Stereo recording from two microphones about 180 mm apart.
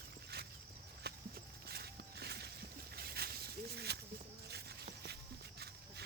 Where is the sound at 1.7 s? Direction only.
65° right (ahead or behind).